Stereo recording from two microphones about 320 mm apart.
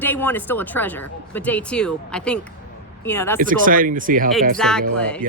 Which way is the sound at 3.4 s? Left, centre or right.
Right.